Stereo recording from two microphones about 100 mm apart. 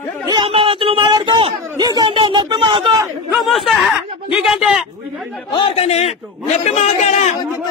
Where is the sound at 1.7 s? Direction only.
45° right (ahead or behind).